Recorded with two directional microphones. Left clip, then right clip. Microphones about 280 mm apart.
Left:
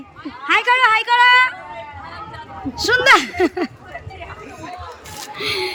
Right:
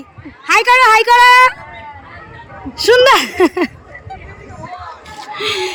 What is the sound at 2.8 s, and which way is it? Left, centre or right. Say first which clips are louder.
Speech: right 4 dB; centre.